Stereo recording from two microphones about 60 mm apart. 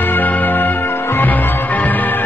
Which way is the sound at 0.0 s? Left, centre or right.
Left.